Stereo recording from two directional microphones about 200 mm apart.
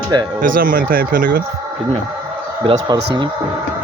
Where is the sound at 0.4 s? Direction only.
45° right (ahead or behind).